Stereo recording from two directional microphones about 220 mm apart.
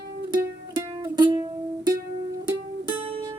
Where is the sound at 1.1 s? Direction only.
20° right (ahead or behind).